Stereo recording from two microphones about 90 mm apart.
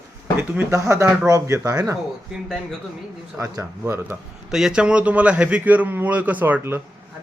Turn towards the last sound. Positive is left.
turn(degrees=-20)  # may be behind; listen again after turning